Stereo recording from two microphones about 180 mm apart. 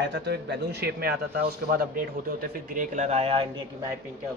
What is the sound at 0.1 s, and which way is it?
A man's voice, 70° right (ahead or behind).